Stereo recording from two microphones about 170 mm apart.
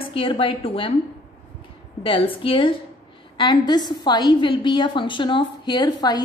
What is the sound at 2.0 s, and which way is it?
A woman's voice, 30° left (ahead or behind).